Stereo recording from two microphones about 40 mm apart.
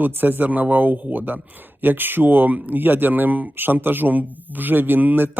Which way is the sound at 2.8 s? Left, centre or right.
Right.